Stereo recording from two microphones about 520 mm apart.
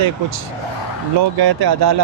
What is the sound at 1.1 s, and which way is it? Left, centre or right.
Speech, right.